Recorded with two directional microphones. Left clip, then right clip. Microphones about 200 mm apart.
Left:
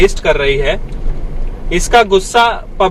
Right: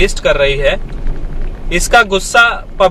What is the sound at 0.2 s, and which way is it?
Speech, 25° right (ahead or behind).